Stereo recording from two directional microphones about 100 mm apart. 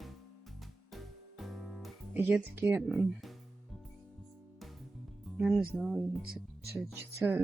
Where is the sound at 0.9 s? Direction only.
Centre (ahead or behind).